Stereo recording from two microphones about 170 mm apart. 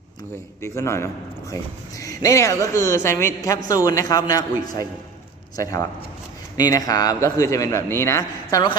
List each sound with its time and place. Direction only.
0.6 s a woman's voice: 15° left (ahead or behind)
6.6 s a man's voice: 20° left (ahead or behind)